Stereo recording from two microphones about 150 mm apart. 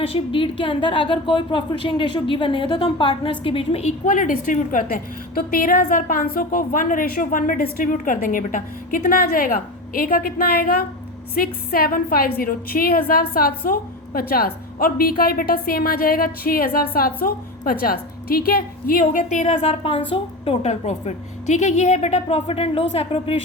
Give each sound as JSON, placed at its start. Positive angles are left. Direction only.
{"t": 0.0, "sound": "a woman's voice", "side_deg": 35}
{"t": 4.0, "sound": "a woman's voice", "side_deg": 60}